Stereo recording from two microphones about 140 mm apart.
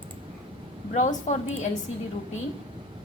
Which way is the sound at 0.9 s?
60° left (ahead or behind).